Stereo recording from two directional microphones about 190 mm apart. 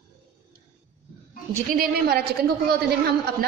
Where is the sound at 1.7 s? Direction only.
50° right (ahead or behind).